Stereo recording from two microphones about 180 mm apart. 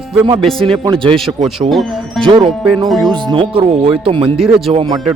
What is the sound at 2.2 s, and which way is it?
Speech, 25° right (ahead or behind).